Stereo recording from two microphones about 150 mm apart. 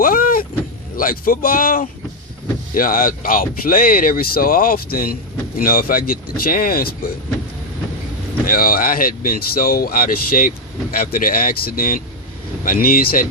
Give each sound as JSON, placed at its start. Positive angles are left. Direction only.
{"t": 0.0, "sound": "vehicle", "side_deg": 70}
{"t": 0.9, "sound": "speech", "side_deg": 70}
{"t": 8.4, "sound": "speech", "side_deg": 70}